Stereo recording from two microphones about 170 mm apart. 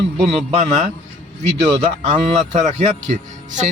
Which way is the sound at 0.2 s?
40° right (ahead or behind).